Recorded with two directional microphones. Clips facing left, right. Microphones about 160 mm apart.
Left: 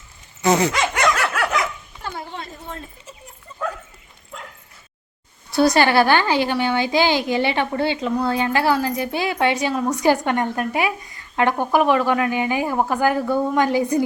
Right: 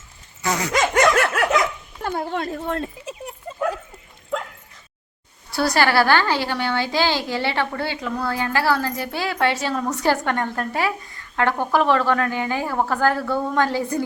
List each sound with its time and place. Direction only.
0.4 s dog: 25° left (ahead or behind)
0.7 s dog: 45° right (ahead or behind)
2.0 s a sound: 55° right (ahead or behind); by 3.3 s 80° right
4.3 s bow-wow: 90° right
5.5 s a woman's voice: 20° left (ahead or behind)